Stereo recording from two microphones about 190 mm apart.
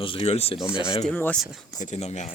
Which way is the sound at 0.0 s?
25° left (ahead or behind).